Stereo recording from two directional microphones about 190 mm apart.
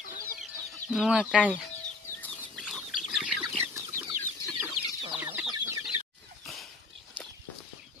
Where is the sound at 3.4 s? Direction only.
15° right (ahead or behind).